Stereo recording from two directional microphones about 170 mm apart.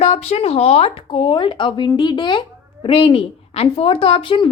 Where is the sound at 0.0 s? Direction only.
40° left (ahead or behind).